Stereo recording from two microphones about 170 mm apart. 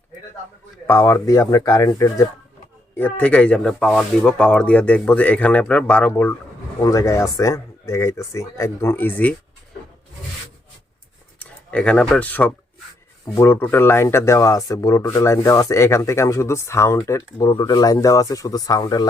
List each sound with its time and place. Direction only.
0.9 s speech: 15° left (ahead or behind)
2.9 s speech: 10° left (ahead or behind)
11.3 s speech: 10° left (ahead or behind)